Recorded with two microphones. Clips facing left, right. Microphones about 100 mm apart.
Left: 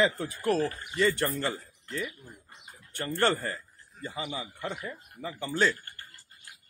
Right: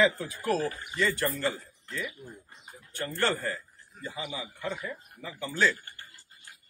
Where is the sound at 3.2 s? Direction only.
50° left (ahead or behind).